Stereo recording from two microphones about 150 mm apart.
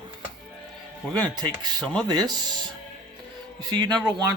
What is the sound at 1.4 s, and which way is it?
Speech, 30° right (ahead or behind).